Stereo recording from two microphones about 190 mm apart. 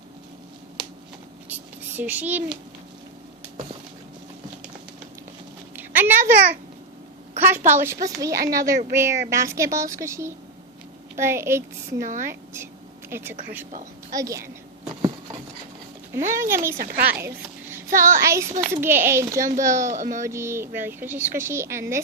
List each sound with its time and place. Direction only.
2.0 s a woman's voice: 10° right (ahead or behind)
5.7 s a sound: 10° right (ahead or behind)
7.3 s a woman's voice: 10° right (ahead or behind)
11.9 s a child's voice: 45° right (ahead or behind)
13.1 s a woman's voice: 10° right (ahead or behind)
16.4 s a woman's voice: 15° right (ahead or behind)
16.7 s speech: 55° right (ahead or behind)
17.2 s a sound: 10° right (ahead or behind)
18.2 s a woman's voice: 15° right (ahead or behind)
19.4 s a child's voice: 45° right (ahead or behind)
20.2 s a woman's voice: 15° right (ahead or behind)